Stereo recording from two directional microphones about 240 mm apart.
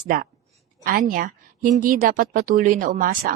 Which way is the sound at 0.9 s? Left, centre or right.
Right.